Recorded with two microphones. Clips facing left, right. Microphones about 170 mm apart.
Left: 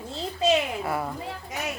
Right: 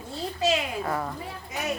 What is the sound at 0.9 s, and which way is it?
Speech, 10° left (ahead or behind).